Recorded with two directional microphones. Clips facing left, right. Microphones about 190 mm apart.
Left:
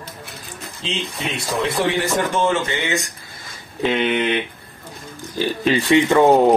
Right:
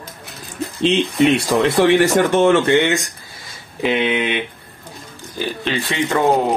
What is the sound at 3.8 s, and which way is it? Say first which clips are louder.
Speech: right 1 dB; 15° right (ahead or behind).